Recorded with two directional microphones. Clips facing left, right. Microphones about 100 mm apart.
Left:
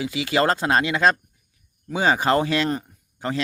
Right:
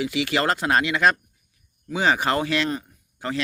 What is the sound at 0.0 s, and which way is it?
Speech, 25° left (ahead or behind).